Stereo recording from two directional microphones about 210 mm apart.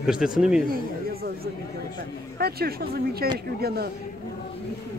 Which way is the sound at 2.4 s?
50° right (ahead or behind).